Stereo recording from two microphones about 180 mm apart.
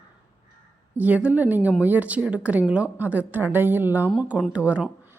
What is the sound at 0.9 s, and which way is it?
A woman's voice, 10° right (ahead or behind).